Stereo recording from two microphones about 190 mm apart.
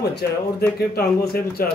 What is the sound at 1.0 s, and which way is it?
Speech, 55° left (ahead or behind).